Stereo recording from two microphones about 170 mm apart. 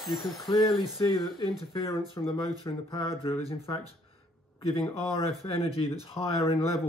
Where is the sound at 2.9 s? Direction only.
25° left (ahead or behind).